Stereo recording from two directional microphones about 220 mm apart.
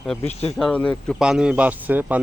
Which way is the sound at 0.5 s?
5° left (ahead or behind).